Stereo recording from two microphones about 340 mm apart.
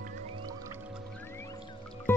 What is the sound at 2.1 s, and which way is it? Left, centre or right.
Music, centre.